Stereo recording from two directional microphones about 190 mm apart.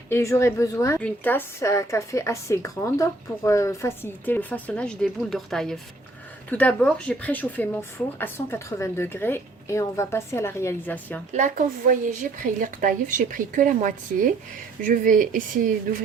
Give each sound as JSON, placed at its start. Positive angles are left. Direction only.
{"t": 0.1, "sound": "a woman's voice", "side_deg": 15}
{"t": 11.3, "sound": "a woman's voice", "side_deg": -40}